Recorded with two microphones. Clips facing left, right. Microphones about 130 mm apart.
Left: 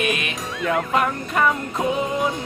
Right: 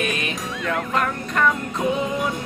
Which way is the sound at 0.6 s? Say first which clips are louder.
Left 3 dB; 5° left (ahead or behind).